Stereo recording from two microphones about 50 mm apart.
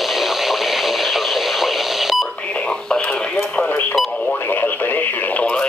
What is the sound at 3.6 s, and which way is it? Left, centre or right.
Radio, left.